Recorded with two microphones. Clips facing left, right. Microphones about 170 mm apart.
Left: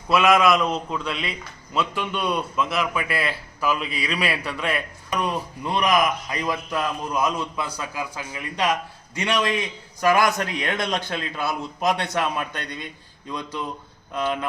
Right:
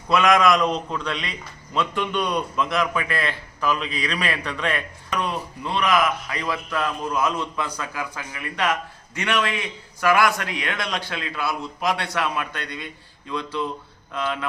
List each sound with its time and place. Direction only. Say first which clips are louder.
0.1 s a man's voice: even; 5° left (ahead or behind)